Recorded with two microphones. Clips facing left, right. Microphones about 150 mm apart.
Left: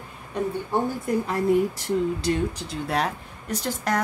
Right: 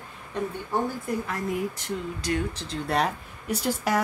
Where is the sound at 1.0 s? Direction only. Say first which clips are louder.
Left 6 dB; 30° left (ahead or behind).